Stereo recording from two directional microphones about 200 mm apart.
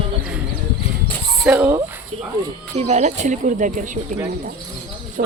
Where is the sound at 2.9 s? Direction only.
35° right (ahead or behind).